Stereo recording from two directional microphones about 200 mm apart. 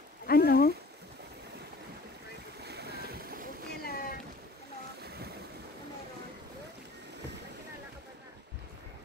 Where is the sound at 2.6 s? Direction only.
55° right (ahead or behind).